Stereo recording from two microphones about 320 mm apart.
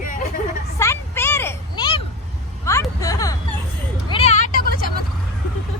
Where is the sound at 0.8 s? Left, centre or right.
Centre; by 4.9 s left.